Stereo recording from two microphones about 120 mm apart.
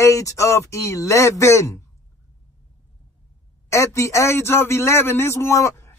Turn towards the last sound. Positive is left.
turn(degrees=25)  # may be behind; listen again after turning